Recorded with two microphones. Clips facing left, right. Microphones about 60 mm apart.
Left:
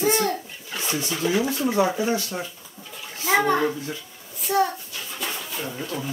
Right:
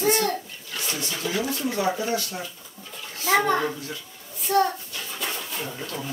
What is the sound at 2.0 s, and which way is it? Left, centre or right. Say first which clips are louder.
Speech: left 3 dB; left.